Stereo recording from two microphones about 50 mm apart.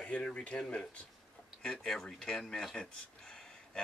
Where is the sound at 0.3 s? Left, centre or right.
Left.